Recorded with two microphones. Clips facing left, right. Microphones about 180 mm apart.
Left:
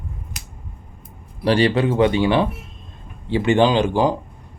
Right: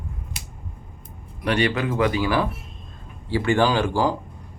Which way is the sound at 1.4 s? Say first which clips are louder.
Left 5 dB; 30° left (ahead or behind).